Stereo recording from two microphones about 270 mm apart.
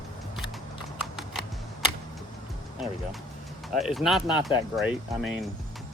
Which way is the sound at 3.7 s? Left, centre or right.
Centre.